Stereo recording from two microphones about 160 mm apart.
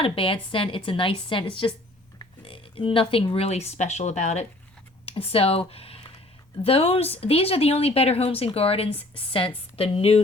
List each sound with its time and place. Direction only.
0.0 s a woman's voice: 35° left (ahead or behind)